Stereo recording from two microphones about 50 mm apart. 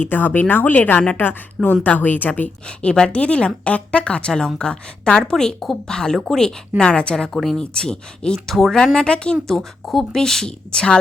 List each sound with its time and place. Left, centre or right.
0.0 s speech: left
2.6 s a woman's voice: centre
6.0 s a woman's voice: centre
8.5 s speech: centre
9.0 s speech: centre